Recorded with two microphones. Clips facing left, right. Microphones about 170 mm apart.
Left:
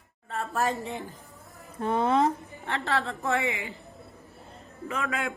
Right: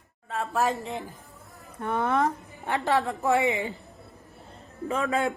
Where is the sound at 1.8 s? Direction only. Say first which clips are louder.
Left 2 dB; 20° left (ahead or behind).